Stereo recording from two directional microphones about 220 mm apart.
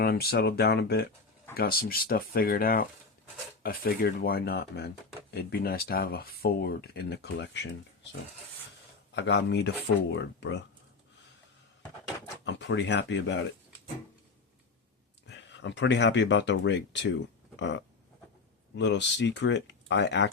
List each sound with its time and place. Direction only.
0.0 s speech: 45° left (ahead or behind)
9.1 s speech: 50° left (ahead or behind)
12.5 s speech: 55° left (ahead or behind)
15.3 s speech: 55° left (ahead or behind)
18.8 s speech: 55° left (ahead or behind)